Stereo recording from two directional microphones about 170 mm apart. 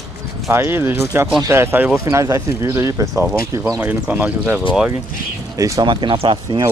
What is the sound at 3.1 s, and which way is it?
Speech, 5° right (ahead or behind).